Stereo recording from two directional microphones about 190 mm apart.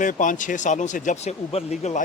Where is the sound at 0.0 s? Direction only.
40° left (ahead or behind).